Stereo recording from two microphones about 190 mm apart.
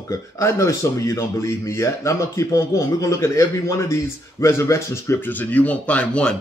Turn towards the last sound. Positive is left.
turn(degrees=5)  # may be behind; listen again after turning